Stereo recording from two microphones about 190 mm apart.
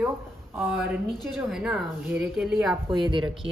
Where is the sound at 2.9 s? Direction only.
25° right (ahead or behind).